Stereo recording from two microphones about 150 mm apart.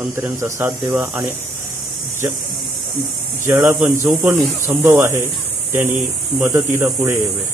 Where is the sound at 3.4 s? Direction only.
20° right (ahead or behind).